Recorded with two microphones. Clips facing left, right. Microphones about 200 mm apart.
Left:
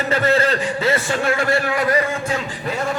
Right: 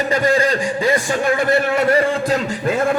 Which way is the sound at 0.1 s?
15° right (ahead or behind).